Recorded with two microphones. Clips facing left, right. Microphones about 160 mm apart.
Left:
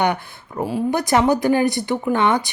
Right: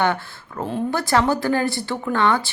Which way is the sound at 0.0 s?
15° left (ahead or behind).